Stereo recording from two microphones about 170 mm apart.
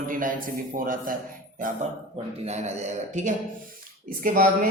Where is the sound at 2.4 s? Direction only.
40° right (ahead or behind).